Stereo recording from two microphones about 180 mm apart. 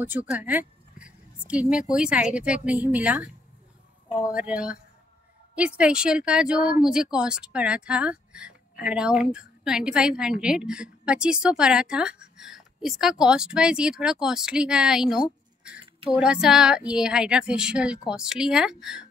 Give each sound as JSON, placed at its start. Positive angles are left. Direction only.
{"t": 0.0, "sound": "a woman's voice", "side_deg": -10}
{"t": 4.3, "sound": "a woman's voice", "side_deg": -5}
{"t": 15.8, "sound": "a sound", "side_deg": -30}
{"t": 16.2, "sound": "a woman's voice", "side_deg": -5}